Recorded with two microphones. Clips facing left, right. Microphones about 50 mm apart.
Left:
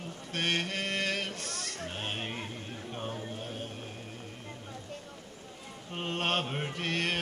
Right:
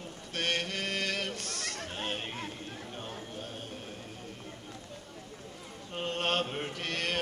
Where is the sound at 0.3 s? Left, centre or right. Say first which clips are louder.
Left 1 dB; centre.